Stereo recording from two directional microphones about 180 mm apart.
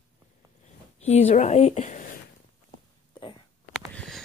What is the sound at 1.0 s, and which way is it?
Speech, 35° left (ahead or behind).